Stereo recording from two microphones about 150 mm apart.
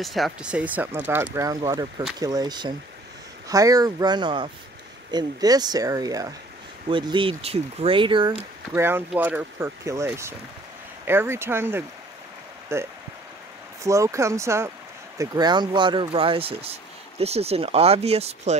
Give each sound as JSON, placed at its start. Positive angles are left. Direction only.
{"t": 0.0, "sound": "speech", "side_deg": 0}
{"t": 8.7, "sound": "speech", "side_deg": -15}